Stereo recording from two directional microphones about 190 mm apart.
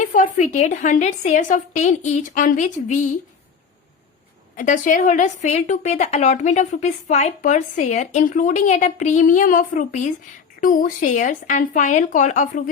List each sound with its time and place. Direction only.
0.0 s a woman's voice: 45° left (ahead or behind)
4.5 s a woman's voice: 40° left (ahead or behind)